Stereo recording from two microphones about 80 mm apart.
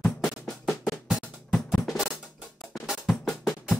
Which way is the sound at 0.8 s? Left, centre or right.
Centre.